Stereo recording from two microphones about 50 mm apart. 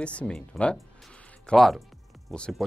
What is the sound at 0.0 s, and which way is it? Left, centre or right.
Speech, left.